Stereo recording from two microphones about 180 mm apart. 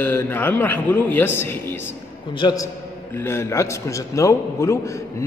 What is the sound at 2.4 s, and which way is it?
A man's voice, 25° left (ahead or behind).